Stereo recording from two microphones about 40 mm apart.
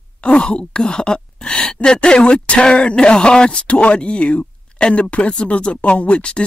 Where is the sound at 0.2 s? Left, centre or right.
Left.